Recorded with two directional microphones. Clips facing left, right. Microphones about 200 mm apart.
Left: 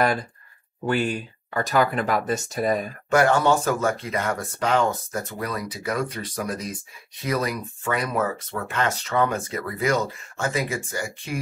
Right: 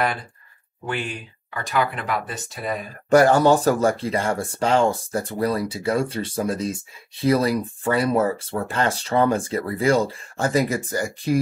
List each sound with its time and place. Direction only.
0.8 s speech: 40° left (ahead or behind)
3.1 s speech: 35° right (ahead or behind)